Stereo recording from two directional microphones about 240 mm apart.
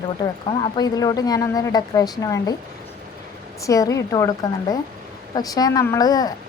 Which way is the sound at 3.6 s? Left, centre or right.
Centre.